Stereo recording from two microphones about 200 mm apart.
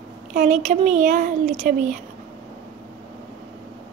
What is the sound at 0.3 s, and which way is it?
Speech, 40° right (ahead or behind).